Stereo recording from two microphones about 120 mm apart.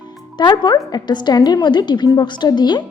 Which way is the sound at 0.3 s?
40° left (ahead or behind).